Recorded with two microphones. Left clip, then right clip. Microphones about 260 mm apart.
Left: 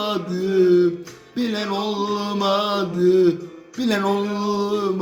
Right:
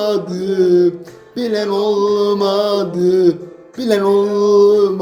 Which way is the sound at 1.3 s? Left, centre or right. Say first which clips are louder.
Right 7 dB; centre.